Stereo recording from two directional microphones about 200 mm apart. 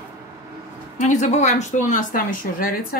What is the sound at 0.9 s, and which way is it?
Speech, 35° left (ahead or behind).